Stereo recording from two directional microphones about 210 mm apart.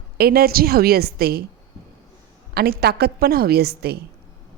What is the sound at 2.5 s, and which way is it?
A woman's voice, 50° right (ahead or behind).